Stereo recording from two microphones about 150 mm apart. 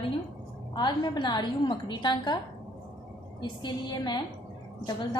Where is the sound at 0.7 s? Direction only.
30° left (ahead or behind).